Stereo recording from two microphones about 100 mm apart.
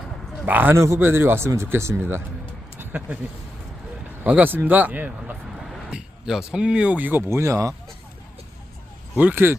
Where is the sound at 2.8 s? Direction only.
15° right (ahead or behind).